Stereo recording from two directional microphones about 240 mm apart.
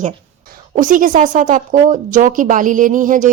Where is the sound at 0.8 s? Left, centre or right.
Right.